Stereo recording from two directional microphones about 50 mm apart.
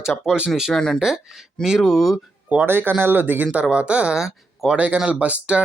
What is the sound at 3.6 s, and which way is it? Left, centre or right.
Speech, right.